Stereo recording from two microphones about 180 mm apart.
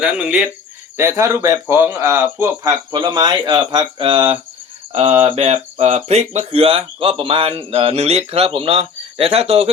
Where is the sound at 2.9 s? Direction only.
25° right (ahead or behind).